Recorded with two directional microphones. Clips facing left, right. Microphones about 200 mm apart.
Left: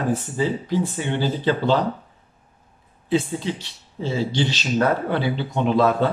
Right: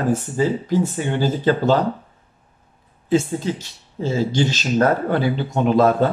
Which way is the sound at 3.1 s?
45° right (ahead or behind).